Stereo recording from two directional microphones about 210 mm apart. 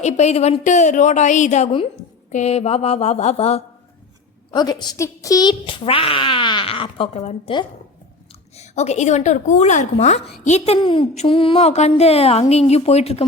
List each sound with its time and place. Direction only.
0.0 s a woman's voice: 30° left (ahead or behind)
4.5 s a woman's voice: 20° left (ahead or behind)